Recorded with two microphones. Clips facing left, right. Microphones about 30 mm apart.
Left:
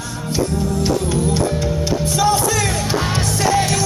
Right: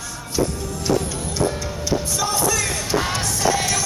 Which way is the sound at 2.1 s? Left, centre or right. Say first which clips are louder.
Left 7 dB; left.